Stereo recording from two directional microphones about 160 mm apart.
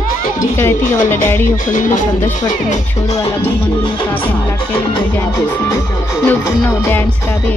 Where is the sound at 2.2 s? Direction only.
25° left (ahead or behind).